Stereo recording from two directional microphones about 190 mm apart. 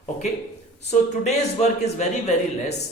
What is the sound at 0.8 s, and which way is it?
A man's voice, 35° left (ahead or behind).